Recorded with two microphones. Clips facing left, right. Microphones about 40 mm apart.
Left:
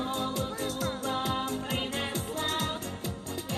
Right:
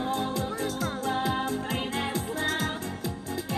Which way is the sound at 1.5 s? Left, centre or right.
Left.